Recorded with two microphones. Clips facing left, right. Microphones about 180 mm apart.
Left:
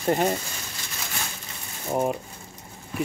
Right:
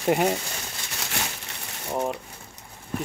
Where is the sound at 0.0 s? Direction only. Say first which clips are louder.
Right 1 dB; 10° right (ahead or behind).